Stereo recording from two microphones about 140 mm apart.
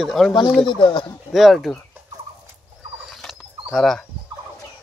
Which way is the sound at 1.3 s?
Centre (ahead or behind).